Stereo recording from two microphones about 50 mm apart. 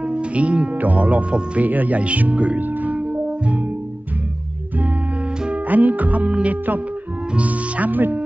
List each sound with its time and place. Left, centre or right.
0.0 s speech: right
2.6 s music: right
5.5 s music: right
7.3 s speech: right